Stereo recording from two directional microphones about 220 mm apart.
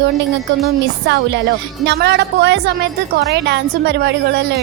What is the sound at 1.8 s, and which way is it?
A woman's voice, 50° right (ahead or behind).